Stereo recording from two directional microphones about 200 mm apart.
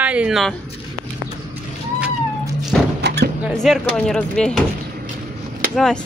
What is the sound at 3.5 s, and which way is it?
Speech, centre (ahead or behind).